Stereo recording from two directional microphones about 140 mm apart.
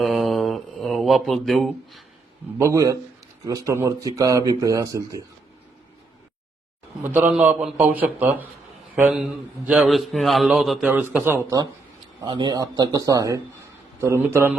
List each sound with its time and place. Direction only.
0.0 s mantra: centre (ahead or behind)
2.6 s speech: 20° right (ahead or behind)
7.0 s a man's voice: 15° right (ahead or behind)
10.8 s speech: 15° right (ahead or behind)
12.2 s speech: 35° right (ahead or behind); by 14.6 s 20° right (ahead or behind)